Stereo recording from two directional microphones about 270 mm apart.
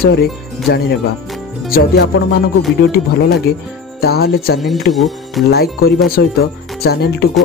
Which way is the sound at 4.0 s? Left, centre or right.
Left.